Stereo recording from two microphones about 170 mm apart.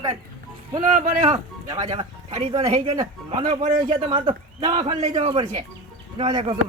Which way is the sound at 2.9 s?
25° right (ahead or behind).